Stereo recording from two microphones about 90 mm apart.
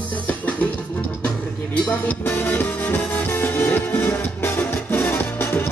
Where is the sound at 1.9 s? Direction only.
20° left (ahead or behind).